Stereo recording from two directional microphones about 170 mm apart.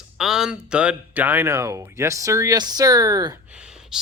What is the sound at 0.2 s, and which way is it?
Speech, 5° right (ahead or behind).